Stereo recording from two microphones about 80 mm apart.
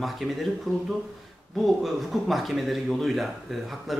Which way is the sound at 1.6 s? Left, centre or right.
Centre.